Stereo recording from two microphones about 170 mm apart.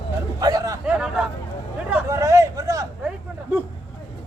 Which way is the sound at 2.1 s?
20° right (ahead or behind).